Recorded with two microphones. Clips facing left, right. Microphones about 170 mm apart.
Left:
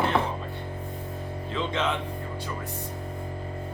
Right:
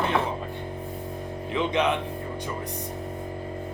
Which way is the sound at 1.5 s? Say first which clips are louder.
Right 4 dB; 15° right (ahead or behind).